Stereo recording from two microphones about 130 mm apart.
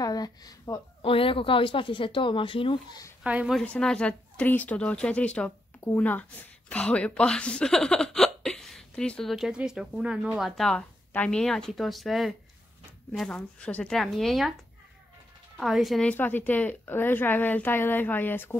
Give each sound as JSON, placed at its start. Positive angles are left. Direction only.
{"t": 0.0, "sound": "a woman's voice", "side_deg": 30}
{"t": 1.0, "sound": "speech", "side_deg": 45}
{"t": 3.3, "sound": "a woman's voice", "side_deg": -10}
{"t": 3.5, "sound": "speech", "side_deg": 5}
{"t": 15.5, "sound": "speech", "side_deg": 0}
{"t": 16.1, "sound": "speech", "side_deg": 15}